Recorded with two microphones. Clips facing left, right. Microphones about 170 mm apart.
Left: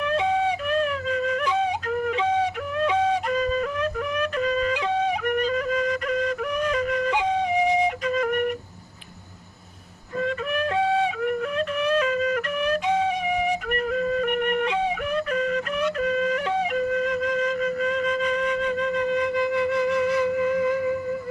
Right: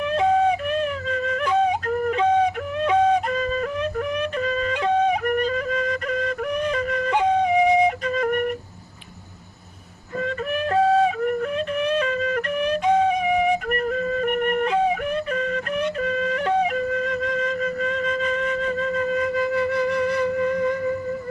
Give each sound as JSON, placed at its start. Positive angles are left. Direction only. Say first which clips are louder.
{"t": 0.2, "sound": "flute", "louder": "right 7 dB", "side_deg": -45}
{"t": 1.5, "sound": "music", "louder": "right 4 dB", "side_deg": -45}
{"t": 2.9, "sound": "flute", "louder": "right 6 dB", "side_deg": -45}
{"t": 7.7, "sound": "flute", "louder": "right 4 dB", "side_deg": 0}
{"t": 8.0, "sound": "flute", "louder": "right 1 dB", "side_deg": -40}
{"t": 10.7, "sound": "flute", "louder": "right 6 dB", "side_deg": -45}
{"t": 17.6, "sound": "flute", "louder": "left 1 dB", "side_deg": -40}
{"t": 19.7, "sound": "music", "louder": "even", "side_deg": 0}